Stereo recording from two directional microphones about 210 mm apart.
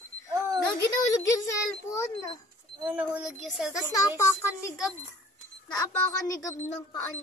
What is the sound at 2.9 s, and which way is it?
Speech, 5° right (ahead or behind).